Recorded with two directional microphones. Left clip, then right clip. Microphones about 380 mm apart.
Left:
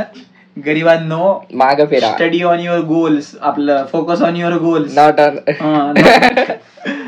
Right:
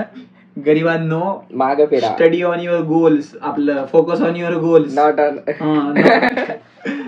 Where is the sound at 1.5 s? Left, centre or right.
Left.